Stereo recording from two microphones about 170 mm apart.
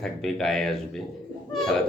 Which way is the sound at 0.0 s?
Centre (ahead or behind).